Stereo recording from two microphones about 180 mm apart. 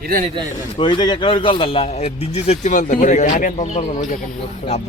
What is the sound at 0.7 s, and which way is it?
A man's voice, 25° left (ahead or behind).